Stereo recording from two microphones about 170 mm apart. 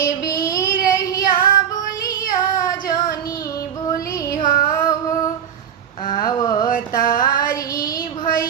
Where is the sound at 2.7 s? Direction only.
20° left (ahead or behind).